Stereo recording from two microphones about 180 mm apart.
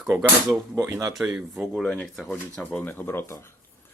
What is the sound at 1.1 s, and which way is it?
Speech, 5° right (ahead or behind).